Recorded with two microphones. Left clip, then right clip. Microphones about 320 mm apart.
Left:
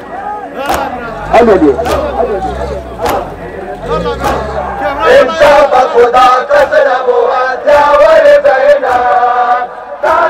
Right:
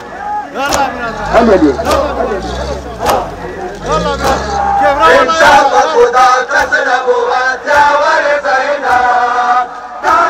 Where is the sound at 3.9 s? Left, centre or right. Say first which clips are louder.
Right 1 dB; right.